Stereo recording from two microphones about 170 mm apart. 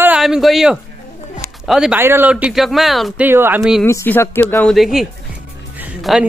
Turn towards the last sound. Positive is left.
turn(degrees=-5)  # may be behind; listen again after turning